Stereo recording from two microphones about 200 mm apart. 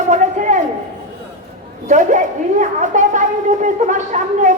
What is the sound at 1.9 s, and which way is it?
A woman's voice, 40° right (ahead or behind).